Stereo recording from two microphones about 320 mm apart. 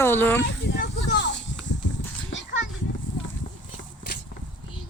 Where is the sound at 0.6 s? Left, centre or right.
Left.